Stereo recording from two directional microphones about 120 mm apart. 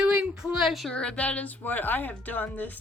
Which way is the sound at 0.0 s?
10° right (ahead or behind).